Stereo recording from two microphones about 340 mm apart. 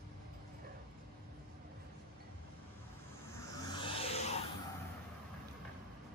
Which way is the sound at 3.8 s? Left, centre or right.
Centre.